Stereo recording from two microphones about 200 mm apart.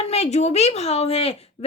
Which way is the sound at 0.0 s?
30° left (ahead or behind).